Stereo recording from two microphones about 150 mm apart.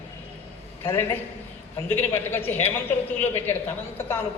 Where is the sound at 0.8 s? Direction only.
15° left (ahead or behind).